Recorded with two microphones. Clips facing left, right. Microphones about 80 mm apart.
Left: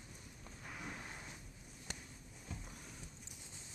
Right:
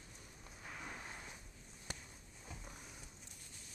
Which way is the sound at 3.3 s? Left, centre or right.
Left.